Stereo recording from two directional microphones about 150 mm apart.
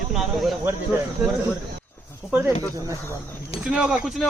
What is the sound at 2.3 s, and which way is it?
Speech, 10° right (ahead or behind).